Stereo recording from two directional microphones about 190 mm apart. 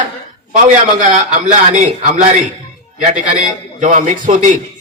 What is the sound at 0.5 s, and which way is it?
Speech, 40° right (ahead or behind).